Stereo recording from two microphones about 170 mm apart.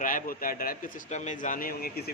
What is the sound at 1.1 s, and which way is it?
A man's voice, 45° left (ahead or behind).